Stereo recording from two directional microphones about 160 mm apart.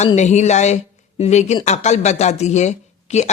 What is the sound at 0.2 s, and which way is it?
Speech, 45° left (ahead or behind).